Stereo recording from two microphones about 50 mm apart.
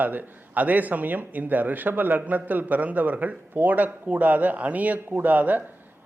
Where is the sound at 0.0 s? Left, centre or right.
Right.